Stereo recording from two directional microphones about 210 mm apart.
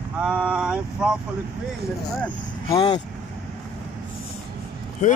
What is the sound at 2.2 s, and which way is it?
Speech, 15° left (ahead or behind).